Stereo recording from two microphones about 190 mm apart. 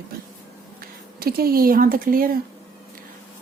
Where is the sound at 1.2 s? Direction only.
50° right (ahead or behind).